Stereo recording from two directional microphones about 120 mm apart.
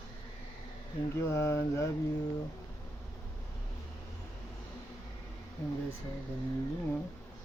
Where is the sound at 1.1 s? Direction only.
20° left (ahead or behind).